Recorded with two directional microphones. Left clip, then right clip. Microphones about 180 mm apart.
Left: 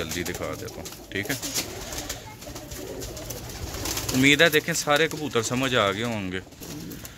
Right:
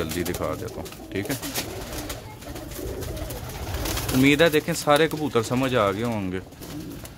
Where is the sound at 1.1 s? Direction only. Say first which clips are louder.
Even; 5° right (ahead or behind).